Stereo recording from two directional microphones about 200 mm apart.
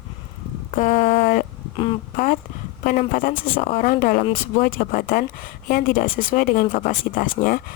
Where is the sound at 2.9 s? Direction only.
45° left (ahead or behind).